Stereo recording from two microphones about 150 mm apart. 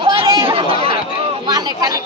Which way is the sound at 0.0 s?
35° right (ahead or behind).